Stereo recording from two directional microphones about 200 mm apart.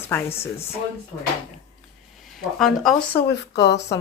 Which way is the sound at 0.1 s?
10° left (ahead or behind).